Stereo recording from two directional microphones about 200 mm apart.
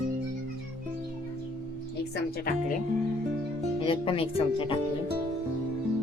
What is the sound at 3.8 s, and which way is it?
Speech, 25° left (ahead or behind).